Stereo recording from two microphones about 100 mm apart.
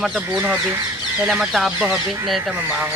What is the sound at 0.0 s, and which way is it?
Speech, 5° right (ahead or behind).